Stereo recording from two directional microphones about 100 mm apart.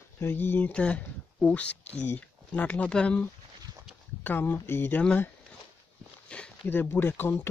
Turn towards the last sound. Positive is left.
turn(degrees=25)  # may be behind; listen again after turning